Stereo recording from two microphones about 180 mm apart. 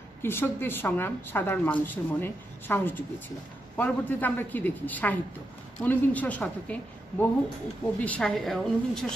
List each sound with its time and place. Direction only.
0.2 s a woman's voice: 10° left (ahead or behind)